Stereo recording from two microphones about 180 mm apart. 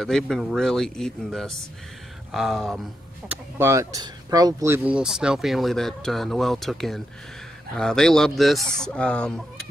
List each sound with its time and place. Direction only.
0.0 s speech: 5° left (ahead or behind)
3.5 s speech: 15° right (ahead or behind); by 9.7 s 5° left (ahead or behind)